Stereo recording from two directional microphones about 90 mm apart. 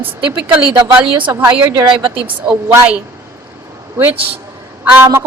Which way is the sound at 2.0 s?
75° right (ahead or behind).